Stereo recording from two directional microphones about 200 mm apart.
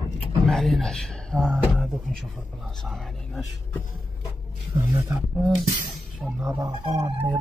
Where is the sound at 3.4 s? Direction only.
15° left (ahead or behind).